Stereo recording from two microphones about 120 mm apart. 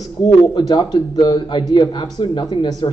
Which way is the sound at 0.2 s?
45° left (ahead or behind).